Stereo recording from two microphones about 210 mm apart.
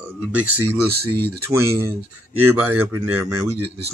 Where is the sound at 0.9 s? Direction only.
50° right (ahead or behind).